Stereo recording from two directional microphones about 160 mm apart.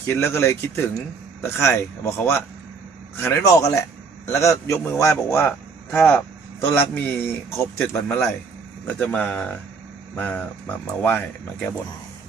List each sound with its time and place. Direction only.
0.1 s a man's voice: 15° left (ahead or behind)